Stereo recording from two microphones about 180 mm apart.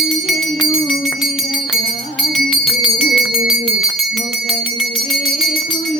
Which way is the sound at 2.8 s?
Centre (ahead or behind).